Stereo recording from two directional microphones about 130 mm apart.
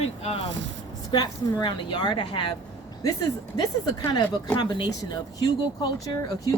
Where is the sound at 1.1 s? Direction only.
35° left (ahead or behind).